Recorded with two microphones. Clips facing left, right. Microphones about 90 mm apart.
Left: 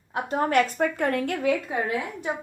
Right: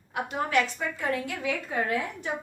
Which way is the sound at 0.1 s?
40° left (ahead or behind).